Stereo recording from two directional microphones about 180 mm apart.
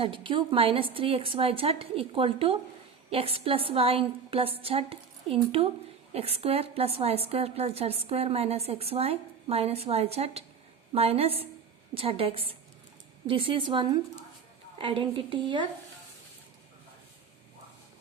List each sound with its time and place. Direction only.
0.0 s a woman's voice: 30° right (ahead or behind)